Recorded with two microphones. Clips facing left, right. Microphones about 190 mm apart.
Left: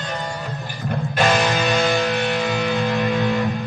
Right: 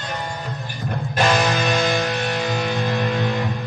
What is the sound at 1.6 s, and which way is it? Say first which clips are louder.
Music: left 1 dB; 35° left (ahead or behind).